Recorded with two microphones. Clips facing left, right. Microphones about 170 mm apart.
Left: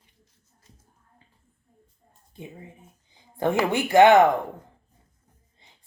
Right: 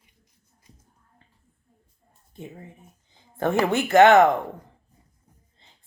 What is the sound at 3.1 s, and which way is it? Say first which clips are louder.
Speech: even; 15° left (ahead or behind).